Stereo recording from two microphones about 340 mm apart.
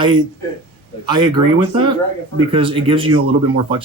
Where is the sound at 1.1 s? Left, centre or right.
Centre.